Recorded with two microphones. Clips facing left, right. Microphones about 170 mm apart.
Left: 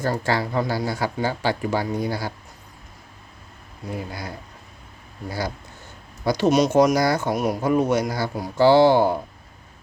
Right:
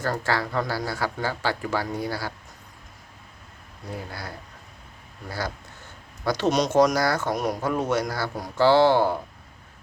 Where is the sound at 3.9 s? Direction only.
15° left (ahead or behind).